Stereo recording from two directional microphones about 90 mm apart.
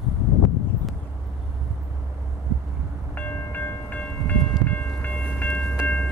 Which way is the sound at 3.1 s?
20° left (ahead or behind).